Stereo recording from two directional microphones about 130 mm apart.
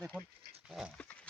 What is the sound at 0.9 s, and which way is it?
Pig, 10° left (ahead or behind).